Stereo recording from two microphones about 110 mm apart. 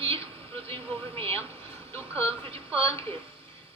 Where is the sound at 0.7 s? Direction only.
60° right (ahead or behind).